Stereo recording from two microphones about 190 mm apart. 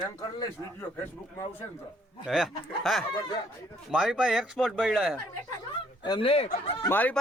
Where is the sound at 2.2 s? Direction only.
Centre (ahead or behind).